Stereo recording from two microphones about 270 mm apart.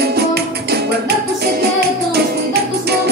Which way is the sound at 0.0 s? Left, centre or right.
Right.